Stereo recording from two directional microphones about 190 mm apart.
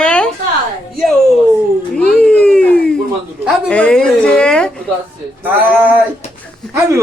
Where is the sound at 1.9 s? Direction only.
5° left (ahead or behind).